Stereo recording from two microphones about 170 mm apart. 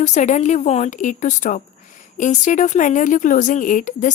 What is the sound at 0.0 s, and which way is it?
A woman's voice, 45° left (ahead or behind).